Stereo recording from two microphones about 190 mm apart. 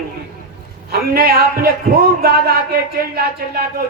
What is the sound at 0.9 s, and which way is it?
Speech, 50° right (ahead or behind).